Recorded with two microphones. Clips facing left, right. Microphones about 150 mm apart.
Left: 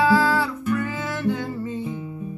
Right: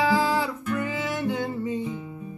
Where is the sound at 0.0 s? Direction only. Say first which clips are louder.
Left 3 dB; 20° right (ahead or behind).